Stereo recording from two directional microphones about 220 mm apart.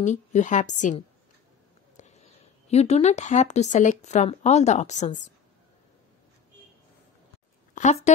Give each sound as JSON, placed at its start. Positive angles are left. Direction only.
{"t": 0.0, "sound": "a woman's voice", "side_deg": 35}
{"t": 7.7, "sound": "speech", "side_deg": 30}